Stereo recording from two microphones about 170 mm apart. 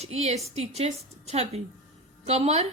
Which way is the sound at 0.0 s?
40° right (ahead or behind).